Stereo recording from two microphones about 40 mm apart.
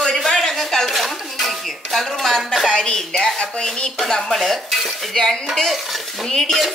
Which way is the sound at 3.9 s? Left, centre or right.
Centre.